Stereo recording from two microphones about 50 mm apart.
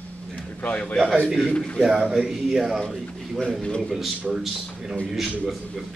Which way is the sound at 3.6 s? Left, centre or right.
Centre.